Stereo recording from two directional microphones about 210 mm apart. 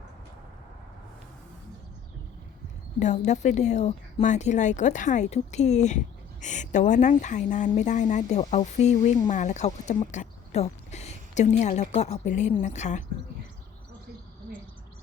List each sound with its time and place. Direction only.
3.0 s speech: 35° left (ahead or behind)